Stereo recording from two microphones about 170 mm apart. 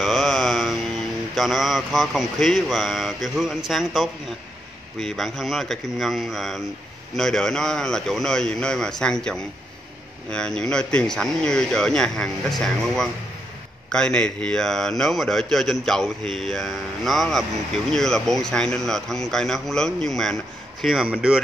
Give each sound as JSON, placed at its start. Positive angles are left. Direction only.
{"t": 0.0, "sound": "mantra", "side_deg": 0}
{"t": 1.3, "sound": "speech", "side_deg": 0}